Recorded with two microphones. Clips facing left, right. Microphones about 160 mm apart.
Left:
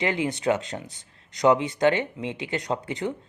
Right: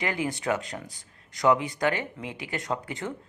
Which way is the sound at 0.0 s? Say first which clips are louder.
Left 4 dB; 25° left (ahead or behind).